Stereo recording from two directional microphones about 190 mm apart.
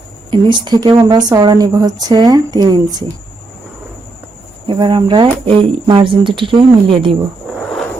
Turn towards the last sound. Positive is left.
turn(degrees=5)  # may be behind; listen again after turning